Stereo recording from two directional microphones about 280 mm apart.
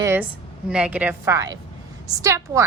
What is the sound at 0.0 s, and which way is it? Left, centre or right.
A woman's voice, centre.